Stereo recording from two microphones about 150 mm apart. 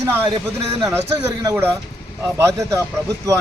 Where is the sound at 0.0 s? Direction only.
15° right (ahead or behind).